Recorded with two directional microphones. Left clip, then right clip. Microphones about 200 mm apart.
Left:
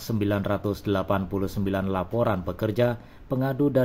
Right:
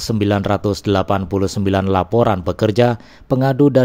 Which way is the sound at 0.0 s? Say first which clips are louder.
Right 9 dB; 45° right (ahead or behind).